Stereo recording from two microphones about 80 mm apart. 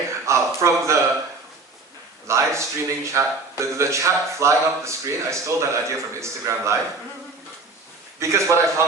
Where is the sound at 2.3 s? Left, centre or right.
Right.